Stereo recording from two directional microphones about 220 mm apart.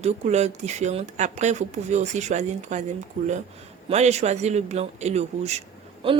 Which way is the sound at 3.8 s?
30° right (ahead or behind).